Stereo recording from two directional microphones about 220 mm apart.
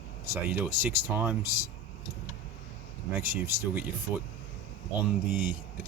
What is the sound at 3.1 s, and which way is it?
Speech, 10° right (ahead or behind).